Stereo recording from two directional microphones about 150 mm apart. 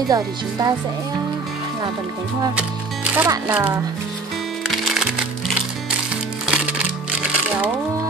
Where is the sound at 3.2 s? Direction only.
15° right (ahead or behind).